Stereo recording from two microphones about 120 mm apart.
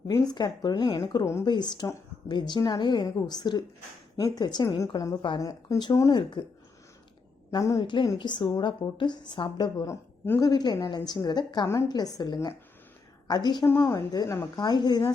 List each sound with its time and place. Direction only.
0.1 s a woman's voice: 35° left (ahead or behind)
1.5 s a woman's voice: 40° left (ahead or behind)
7.5 s a woman's voice: 25° left (ahead or behind)
7.8 s a woman's voice: 40° left (ahead or behind)
9.8 s a man's voice: 20° left (ahead or behind)
10.5 s a woman's voice: 35° left (ahead or behind)
13.7 s a woman's voice: 20° left (ahead or behind)
14.1 s a woman's voice: 35° left (ahead or behind)